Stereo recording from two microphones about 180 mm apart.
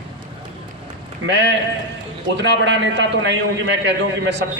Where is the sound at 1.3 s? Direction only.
75° right (ahead or behind).